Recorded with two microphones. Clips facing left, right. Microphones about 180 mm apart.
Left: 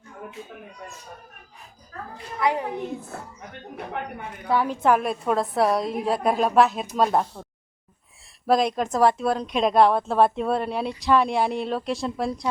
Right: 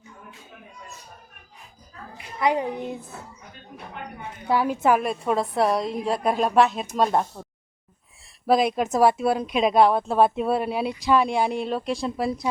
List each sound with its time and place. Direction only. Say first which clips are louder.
2.1 s a woman's voice: right 1 dB; 20° right (ahead or behind)
3.9 s a woman's voice: left 6 dB; 70° left (ahead or behind)
4.4 s speech: even; 10° right (ahead or behind)
8.4 s speech: right 1 dB; 5° right (ahead or behind)